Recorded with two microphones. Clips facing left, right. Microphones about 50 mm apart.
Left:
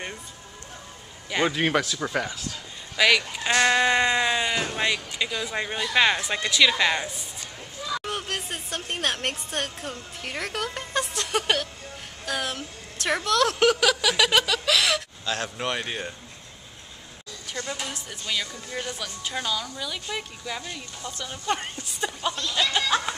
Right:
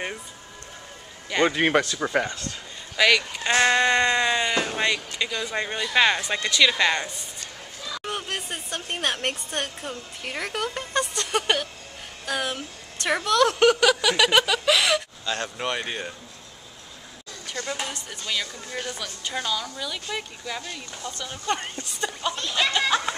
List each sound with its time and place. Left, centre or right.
1.5 s a woman's voice: centre
3.0 s a woman's voice: centre
17.6 s a woman's voice: centre
17.9 s a woman's voice: centre
22.3 s a sound: right